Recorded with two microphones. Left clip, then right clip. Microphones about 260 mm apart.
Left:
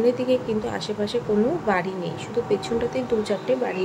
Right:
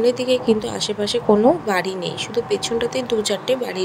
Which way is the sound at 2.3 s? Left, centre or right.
Right.